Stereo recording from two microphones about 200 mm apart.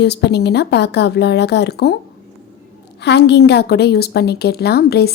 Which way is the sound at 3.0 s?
60° left (ahead or behind).